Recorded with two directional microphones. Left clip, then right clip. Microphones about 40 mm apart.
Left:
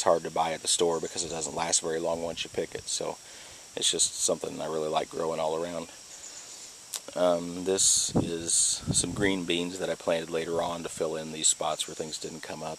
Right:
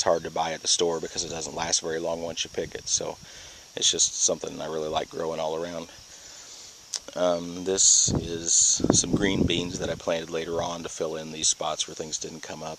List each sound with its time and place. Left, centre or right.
0.1 s speech: centre
1.1 s speech: centre
1.9 s speech: centre
3.8 s speech: centre
4.3 s speech: centre
6.9 s camera: right
7.7 s speech: centre; by 12.7 s right